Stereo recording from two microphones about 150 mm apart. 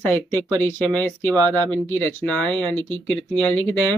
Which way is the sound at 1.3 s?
25° right (ahead or behind).